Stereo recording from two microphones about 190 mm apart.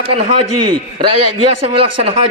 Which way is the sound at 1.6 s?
30° right (ahead or behind).